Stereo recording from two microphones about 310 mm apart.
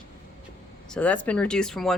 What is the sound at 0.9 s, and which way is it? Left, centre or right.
Speech, centre.